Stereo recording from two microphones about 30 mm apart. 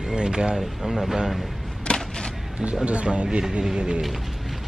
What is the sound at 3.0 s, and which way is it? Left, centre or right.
Speech, right.